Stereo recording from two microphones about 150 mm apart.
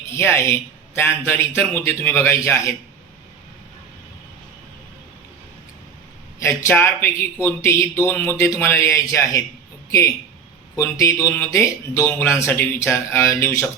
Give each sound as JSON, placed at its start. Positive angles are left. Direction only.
{"t": 0.1, "sound": "speech", "side_deg": 15}
{"t": 6.4, "sound": "speech", "side_deg": 20}
{"t": 10.8, "sound": "speech", "side_deg": 20}